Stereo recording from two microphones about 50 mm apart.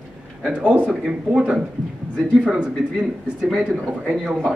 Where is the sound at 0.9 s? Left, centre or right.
Centre.